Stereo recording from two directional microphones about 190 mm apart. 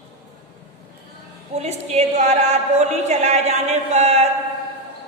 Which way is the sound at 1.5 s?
35° right (ahead or behind).